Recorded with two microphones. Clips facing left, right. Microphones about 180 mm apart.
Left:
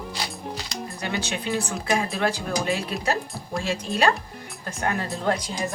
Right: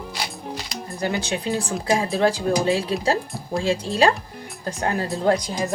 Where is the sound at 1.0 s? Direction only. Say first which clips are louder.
Right 5 dB; 35° right (ahead or behind).